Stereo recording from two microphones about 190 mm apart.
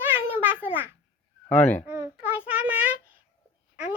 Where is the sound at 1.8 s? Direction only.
10° right (ahead or behind).